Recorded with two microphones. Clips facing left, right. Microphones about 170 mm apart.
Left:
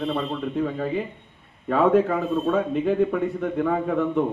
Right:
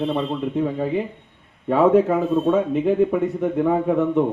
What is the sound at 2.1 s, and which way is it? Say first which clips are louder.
A man's voice: right 4 dB; 20° right (ahead or behind).